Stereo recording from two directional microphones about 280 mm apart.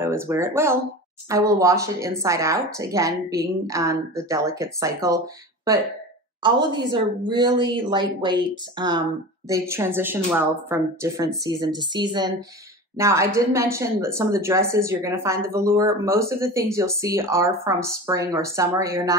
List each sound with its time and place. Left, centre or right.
0.0 s a woman's voice: centre
6.9 s a woman's voice: centre